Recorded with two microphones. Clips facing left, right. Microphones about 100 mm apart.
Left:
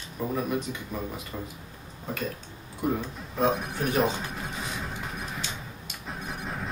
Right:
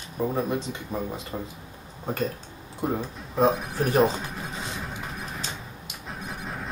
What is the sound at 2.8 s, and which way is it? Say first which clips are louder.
Speech: even; 30° right (ahead or behind).